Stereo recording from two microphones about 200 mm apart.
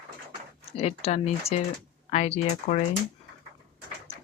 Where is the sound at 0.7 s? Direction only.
30° left (ahead or behind).